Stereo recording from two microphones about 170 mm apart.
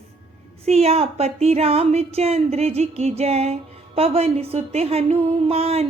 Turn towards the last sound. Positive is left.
turn(degrees=-35)  # may be behind; listen again after turning